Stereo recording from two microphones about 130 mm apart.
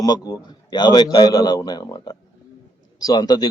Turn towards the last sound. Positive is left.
turn(degrees=30)  # may be behind; listen again after turning